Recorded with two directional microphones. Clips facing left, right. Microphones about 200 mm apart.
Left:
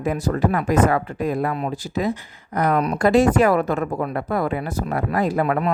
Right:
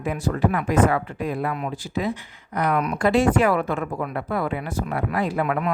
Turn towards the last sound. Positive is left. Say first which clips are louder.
# left 3 dB
turn(degrees=40)  # may be behind; listen again after turning